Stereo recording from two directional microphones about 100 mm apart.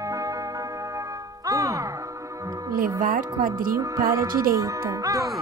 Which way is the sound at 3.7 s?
30° right (ahead or behind).